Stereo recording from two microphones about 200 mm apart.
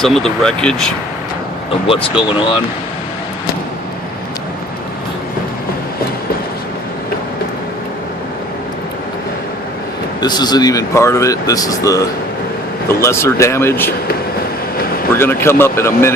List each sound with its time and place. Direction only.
0.0 s speech: centre (ahead or behind)
1.9 s speech: 25° left (ahead or behind)
10.2 s speech: 20° left (ahead or behind)
15.1 s speech: 10° left (ahead or behind)